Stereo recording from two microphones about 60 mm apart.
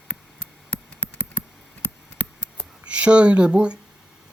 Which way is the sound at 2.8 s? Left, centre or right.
Centre.